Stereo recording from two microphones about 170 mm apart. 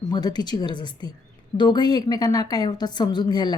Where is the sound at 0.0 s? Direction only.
25° left (ahead or behind).